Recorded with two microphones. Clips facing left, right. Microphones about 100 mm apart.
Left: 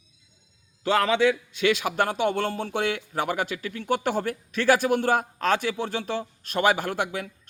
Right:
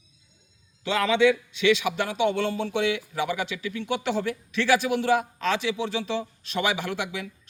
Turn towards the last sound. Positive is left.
turn(degrees=45)  # may be behind; listen again after turning